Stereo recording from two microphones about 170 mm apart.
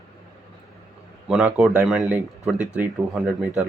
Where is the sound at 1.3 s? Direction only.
5° right (ahead or behind).